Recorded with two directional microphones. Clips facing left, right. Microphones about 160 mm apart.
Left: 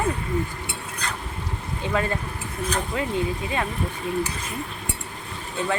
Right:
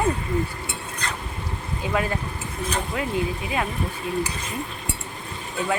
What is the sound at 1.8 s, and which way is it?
Speech, 10° right (ahead or behind).